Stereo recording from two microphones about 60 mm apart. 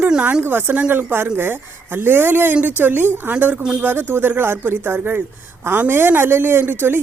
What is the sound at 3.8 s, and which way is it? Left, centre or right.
Speech, right.